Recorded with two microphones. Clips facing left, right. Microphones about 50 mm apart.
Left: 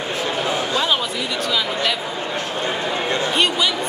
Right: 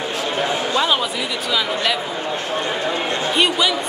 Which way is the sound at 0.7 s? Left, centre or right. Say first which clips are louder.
Right 3 dB; centre.